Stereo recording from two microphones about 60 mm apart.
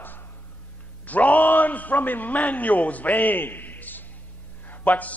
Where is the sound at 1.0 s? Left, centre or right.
Left.